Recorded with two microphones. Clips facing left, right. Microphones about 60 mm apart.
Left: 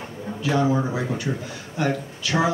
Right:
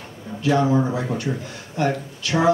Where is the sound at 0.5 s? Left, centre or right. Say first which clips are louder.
Right 2 dB; right.